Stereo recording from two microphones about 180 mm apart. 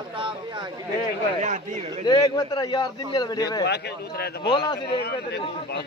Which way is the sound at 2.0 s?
25° left (ahead or behind).